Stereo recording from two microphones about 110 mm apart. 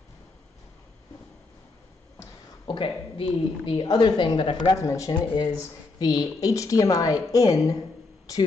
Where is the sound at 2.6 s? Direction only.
50° left (ahead or behind).